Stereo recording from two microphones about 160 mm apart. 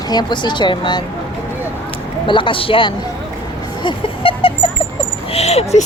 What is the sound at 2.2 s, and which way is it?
Speech, 30° left (ahead or behind).